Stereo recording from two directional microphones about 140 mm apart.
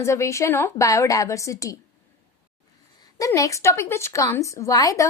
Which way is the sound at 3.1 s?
25° left (ahead or behind).